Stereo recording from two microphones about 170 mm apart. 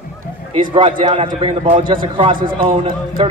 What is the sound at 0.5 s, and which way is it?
A man's voice, 30° right (ahead or behind).